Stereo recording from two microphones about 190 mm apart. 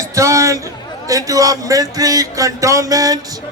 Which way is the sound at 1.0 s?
15° right (ahead or behind).